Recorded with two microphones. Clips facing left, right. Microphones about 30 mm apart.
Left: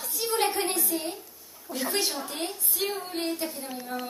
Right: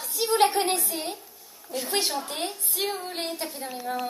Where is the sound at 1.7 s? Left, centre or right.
Centre.